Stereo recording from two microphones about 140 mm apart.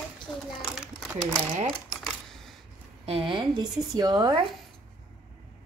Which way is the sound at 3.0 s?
40° right (ahead or behind).